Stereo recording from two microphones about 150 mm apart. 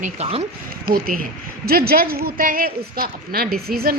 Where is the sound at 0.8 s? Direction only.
80° right.